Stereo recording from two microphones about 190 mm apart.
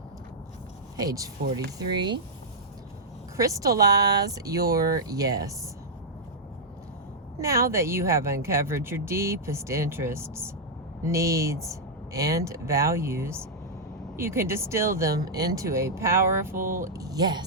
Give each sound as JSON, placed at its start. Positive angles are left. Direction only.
{"t": 0.9, "sound": "speech", "side_deg": -20}
{"t": 3.3, "sound": "speech", "side_deg": -15}
{"t": 7.3, "sound": "speech", "side_deg": -15}